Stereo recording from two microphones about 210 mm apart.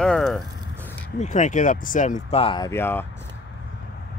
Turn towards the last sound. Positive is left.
turn(degrees=10)  # may be behind; listen again after turning